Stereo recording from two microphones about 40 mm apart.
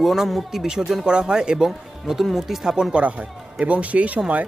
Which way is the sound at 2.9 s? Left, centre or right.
Right.